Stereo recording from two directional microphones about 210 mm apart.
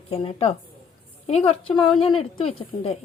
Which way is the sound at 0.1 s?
25° left (ahead or behind).